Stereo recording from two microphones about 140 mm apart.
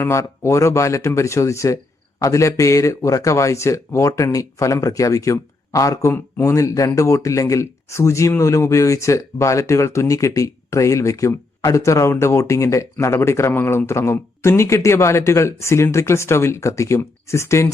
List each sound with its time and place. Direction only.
0.0 s speech: 20° left (ahead or behind)